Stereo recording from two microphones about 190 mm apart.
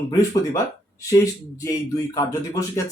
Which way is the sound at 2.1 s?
15° left (ahead or behind).